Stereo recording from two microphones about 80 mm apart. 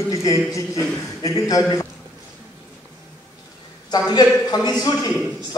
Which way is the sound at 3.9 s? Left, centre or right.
Left.